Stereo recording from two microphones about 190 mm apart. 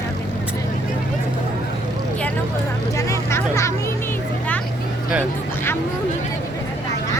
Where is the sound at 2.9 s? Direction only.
15° left (ahead or behind).